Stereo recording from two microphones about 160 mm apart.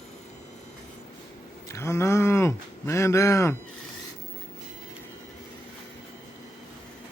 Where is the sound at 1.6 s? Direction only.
20° left (ahead or behind).